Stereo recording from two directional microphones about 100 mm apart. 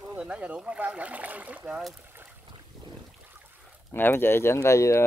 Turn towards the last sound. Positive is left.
turn(degrees=30)  # may be behind; listen again after turning